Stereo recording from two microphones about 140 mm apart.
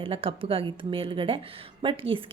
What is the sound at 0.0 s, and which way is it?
A woman's voice, 40° right (ahead or behind).